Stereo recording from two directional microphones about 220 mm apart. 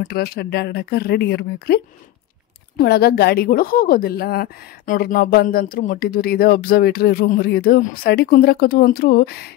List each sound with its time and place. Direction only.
0.0 s a woman's voice: 45° left (ahead or behind)
2.8 s a woman's voice: 45° left (ahead or behind)